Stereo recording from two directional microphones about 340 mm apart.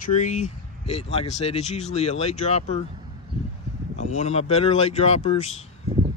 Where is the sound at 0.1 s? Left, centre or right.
Left.